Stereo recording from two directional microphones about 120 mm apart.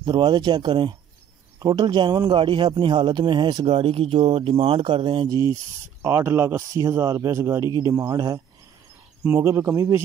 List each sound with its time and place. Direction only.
0.0 s a man's voice: 40° right (ahead or behind)
5.3 s a man's voice: 25° right (ahead or behind)